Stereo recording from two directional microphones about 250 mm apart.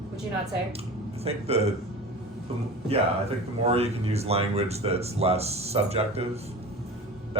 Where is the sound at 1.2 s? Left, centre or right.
Right.